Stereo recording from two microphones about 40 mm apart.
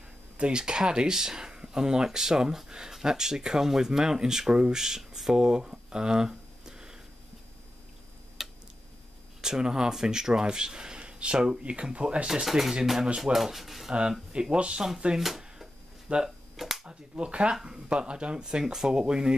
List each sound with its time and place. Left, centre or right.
0.4 s speech: right
8.4 s a sound: centre
9.4 s speech: centre
11.3 s speech: centre
11.6 s speech: right
12.4 s speech: centre
14.3 s speech: right
15.1 s a sound: centre
16.1 s speech: right
16.5 s a sound: centre
16.8 s speech: right